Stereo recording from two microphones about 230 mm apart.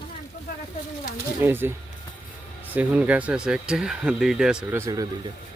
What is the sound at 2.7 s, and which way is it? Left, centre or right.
Speech, centre.